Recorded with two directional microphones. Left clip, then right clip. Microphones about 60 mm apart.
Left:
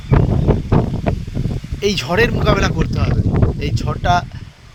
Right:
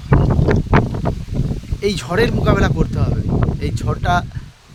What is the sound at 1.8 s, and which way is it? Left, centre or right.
Speech, right.